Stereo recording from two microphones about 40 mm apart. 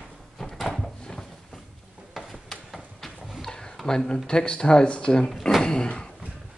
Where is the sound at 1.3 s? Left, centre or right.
Centre.